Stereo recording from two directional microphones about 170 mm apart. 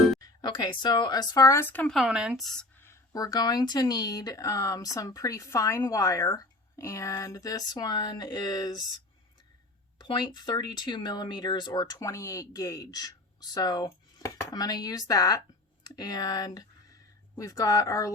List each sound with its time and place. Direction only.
0.2 s speech: 25° left (ahead or behind)
10.0 s speech: 25° left (ahead or behind)